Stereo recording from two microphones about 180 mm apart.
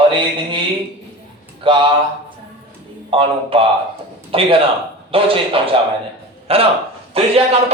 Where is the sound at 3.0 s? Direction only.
30° right (ahead or behind).